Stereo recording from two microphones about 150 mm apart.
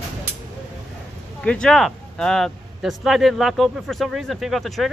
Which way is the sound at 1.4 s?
5° left (ahead or behind).